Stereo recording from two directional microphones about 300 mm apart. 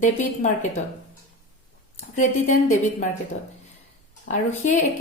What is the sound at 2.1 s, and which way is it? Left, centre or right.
Speech, left.